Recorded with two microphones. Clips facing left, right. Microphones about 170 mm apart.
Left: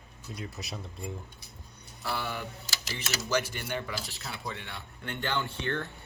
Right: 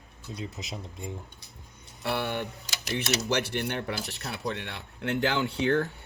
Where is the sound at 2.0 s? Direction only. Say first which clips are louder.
Right 5 dB; 65° right (ahead or behind); by 5.7 s 80° right.